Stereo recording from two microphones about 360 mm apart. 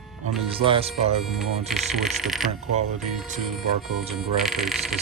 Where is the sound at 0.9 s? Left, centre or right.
Centre.